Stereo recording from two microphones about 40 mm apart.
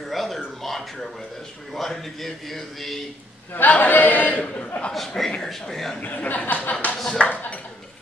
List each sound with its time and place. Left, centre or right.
0.1 s a sound: centre
0.6 s a man's voice: centre
3.7 s speech: left
4.9 s a man's voice: centre
5.9 s speech: left
6.7 s speech: left